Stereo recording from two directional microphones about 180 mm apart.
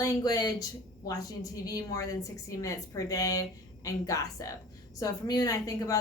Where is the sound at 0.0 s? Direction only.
20° left (ahead or behind).